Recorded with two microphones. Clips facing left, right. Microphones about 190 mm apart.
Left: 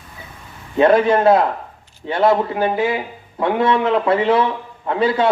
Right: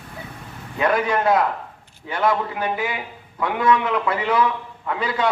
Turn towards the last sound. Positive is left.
turn(degrees=30)  # may be behind; listen again after turning